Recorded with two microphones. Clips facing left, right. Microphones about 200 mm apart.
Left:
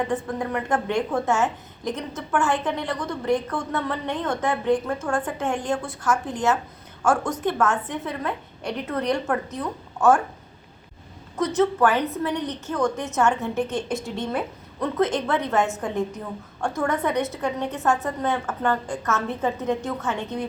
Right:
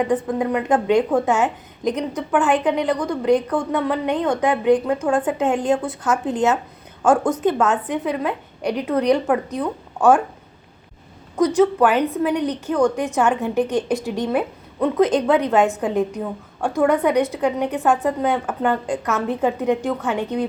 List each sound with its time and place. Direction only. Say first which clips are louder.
0.0 s a woman's voice: right 6 dB; 20° right (ahead or behind)
11.4 s a woman's voice: right 4 dB; 15° right (ahead or behind)